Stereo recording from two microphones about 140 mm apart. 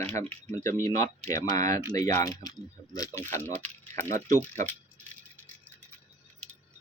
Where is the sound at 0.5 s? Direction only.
20° left (ahead or behind).